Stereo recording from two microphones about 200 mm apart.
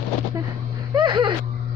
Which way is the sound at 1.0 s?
25° right (ahead or behind).